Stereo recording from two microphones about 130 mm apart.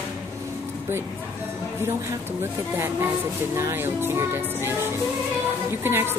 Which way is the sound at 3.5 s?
20° right (ahead or behind).